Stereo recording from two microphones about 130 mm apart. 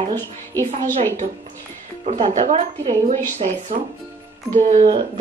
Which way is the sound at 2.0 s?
65° right (ahead or behind).